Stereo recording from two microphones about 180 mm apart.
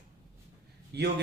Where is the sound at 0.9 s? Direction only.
65° right (ahead or behind).